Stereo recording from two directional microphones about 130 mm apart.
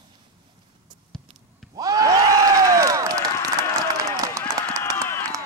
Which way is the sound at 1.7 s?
30° right (ahead or behind).